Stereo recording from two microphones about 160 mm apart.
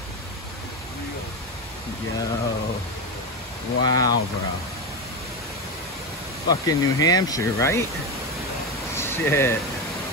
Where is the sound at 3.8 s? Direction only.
25° left (ahead or behind).